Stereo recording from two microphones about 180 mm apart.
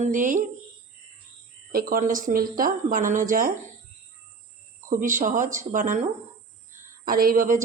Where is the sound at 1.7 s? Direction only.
55° right (ahead or behind).